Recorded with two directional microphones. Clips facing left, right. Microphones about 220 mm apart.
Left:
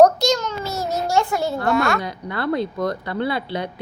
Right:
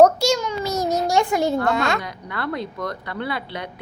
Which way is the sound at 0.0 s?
10° right (ahead or behind).